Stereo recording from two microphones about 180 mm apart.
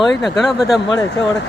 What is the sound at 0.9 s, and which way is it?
Speech, 20° left (ahead or behind).